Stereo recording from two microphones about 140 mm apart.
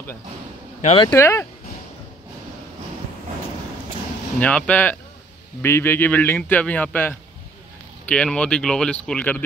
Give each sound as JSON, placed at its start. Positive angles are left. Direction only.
{"t": 1.1, "sound": "a man's voice", "side_deg": 15}
{"t": 4.4, "sound": "a man's voice", "side_deg": 10}